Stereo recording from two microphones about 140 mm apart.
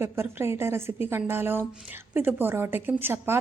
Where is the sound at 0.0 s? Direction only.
20° right (ahead or behind).